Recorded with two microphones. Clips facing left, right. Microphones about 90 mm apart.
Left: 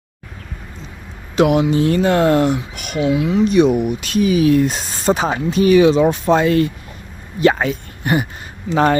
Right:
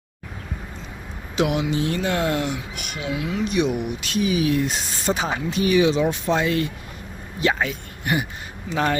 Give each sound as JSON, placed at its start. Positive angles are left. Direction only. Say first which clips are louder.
{"t": 1.4, "sound": "speech", "louder": "left 8 dB", "side_deg": 50}
{"t": 3.0, "sound": "speech", "louder": "left 10 dB", "side_deg": 25}
{"t": 3.4, "sound": "speech", "louder": "left 8 dB", "side_deg": 40}